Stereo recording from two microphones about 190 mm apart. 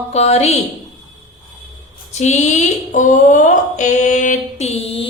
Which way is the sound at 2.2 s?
40° left (ahead or behind).